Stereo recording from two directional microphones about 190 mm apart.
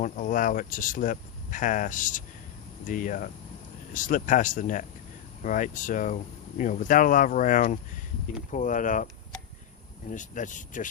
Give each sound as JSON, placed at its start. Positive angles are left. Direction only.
{"t": 0.0, "sound": "speech", "side_deg": 45}
{"t": 10.1, "sound": "speech", "side_deg": 40}